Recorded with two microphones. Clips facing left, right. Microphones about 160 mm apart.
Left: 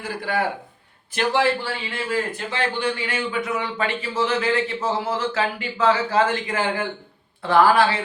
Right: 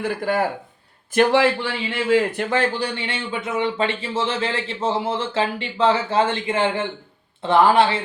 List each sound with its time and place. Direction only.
0.0 s speech: 45° right (ahead or behind)
1.3 s speech: 75° right (ahead or behind)
2.5 s a man's voice: 40° right (ahead or behind); by 7.9 s 25° right (ahead or behind)